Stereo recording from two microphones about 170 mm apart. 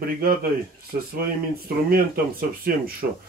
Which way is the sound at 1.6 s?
60° right (ahead or behind).